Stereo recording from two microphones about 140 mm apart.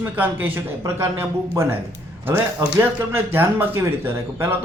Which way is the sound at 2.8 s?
15° right (ahead or behind).